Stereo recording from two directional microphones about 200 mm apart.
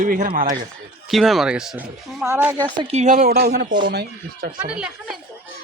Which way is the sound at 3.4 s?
50° right (ahead or behind).